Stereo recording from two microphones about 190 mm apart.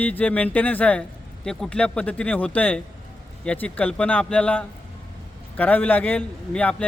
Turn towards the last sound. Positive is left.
turn(degrees=5)  # may be behind; listen again after turning